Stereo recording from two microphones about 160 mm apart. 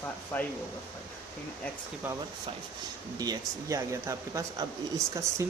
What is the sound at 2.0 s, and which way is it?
Speech, 10° right (ahead or behind).